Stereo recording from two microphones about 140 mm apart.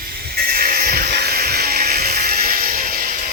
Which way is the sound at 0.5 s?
90° right.